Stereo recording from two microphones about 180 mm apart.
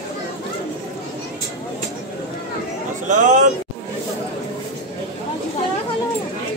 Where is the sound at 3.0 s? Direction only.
45° right (ahead or behind).